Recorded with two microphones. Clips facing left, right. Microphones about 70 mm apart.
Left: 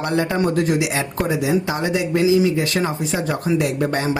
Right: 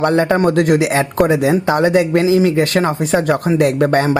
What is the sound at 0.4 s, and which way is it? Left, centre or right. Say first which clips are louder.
Speech: right 6 dB; right.